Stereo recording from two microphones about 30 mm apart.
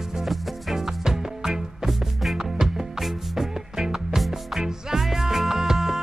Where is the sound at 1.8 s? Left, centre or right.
Centre.